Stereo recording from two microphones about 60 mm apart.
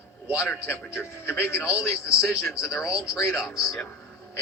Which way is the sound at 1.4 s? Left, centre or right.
Left.